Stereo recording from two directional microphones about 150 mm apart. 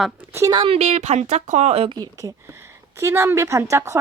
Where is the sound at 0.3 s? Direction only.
20° right (ahead or behind).